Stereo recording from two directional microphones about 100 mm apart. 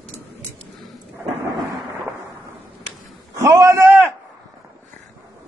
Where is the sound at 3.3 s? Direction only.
30° right (ahead or behind).